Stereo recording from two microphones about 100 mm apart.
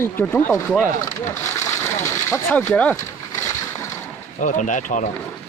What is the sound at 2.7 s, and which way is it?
Speech, 10° left (ahead or behind).